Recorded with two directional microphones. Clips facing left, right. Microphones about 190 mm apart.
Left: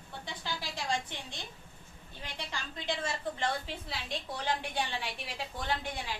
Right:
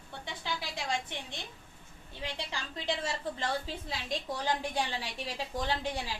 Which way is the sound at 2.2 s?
30° right (ahead or behind).